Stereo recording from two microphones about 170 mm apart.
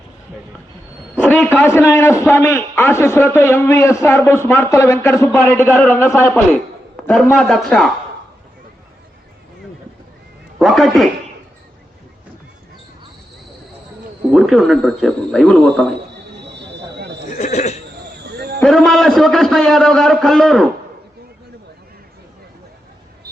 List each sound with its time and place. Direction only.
1.5 s a man's voice: 10° left (ahead or behind)
7.1 s a man's voice: centre (ahead or behind)
10.6 s a woman's voice: centre (ahead or behind)
14.3 s a man's voice: centre (ahead or behind)
16.5 s a sound: 85° right
17.3 s speech: 40° left (ahead or behind)
18.2 s basketball bounce: 70° right (ahead or behind)
18.6 s a man's voice: centre (ahead or behind)